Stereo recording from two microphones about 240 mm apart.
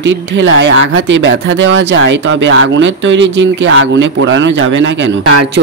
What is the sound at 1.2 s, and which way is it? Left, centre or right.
A man's voice, right.